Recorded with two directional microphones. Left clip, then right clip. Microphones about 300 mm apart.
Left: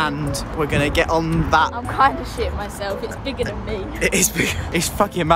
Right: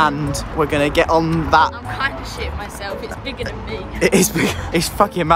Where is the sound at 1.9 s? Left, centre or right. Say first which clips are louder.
Left 5 dB; centre.